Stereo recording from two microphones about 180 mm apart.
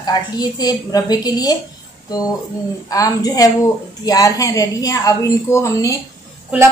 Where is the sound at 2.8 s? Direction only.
20° left (ahead or behind).